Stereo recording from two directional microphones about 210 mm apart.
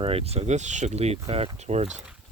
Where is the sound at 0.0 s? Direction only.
30° right (ahead or behind).